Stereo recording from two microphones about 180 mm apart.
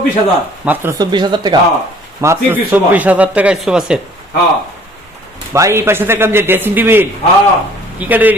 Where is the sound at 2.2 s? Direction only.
15° right (ahead or behind).